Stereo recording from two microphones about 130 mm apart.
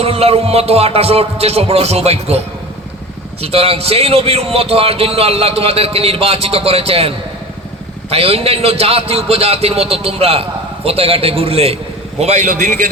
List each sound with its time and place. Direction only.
0.0 s a man's voice: 50° right (ahead or behind)
3.4 s a man's voice: 50° right (ahead or behind)
8.1 s a man's voice: 50° right (ahead or behind)
12.2 s a man's voice: 60° right (ahead or behind)